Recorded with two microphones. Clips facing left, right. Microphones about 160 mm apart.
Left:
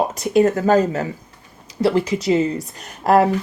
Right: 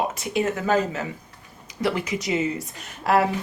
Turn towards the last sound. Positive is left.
turn(degrees=40)  # may be behind; listen again after turning